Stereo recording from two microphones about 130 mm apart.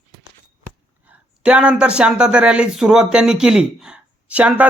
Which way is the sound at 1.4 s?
10° right (ahead or behind).